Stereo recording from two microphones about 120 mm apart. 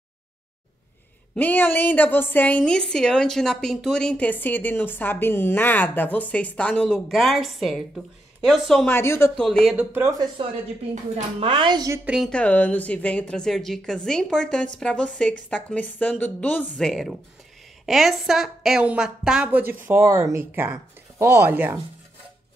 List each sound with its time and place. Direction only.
1.3 s a woman's voice: 15° left (ahead or behind)
8.8 s speech: 20° left (ahead or behind)
9.4 s speech: 5° left (ahead or behind)
9.8 s a woman's voice: 15° right (ahead or behind)
10.4 s a woman's voice: 45° right (ahead or behind)
12.0 s a woman's voice: 10° right (ahead or behind)
12.3 s a woman's voice: 10° left (ahead or behind); by 21.7 s 15° right (ahead or behind)